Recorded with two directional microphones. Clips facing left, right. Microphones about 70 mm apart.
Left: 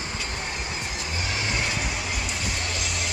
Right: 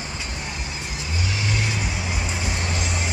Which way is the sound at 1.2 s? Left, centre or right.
Left.